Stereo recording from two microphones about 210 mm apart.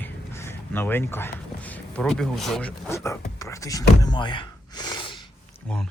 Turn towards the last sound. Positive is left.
turn(degrees=20)  # may be behind; listen again after turning